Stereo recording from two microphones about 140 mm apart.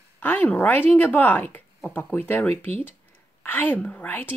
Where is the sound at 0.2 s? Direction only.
10° left (ahead or behind).